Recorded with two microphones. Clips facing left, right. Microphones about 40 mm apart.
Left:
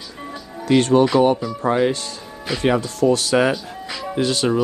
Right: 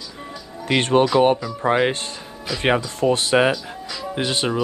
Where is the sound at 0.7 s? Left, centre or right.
Right.